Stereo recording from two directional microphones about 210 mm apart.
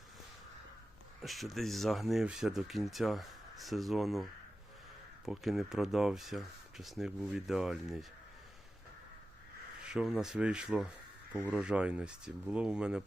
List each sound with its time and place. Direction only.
1.2 s speech: centre (ahead or behind)
9.8 s speech: 5° right (ahead or behind)